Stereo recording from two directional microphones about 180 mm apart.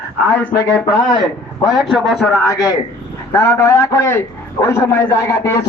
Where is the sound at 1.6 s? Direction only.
Centre (ahead or behind).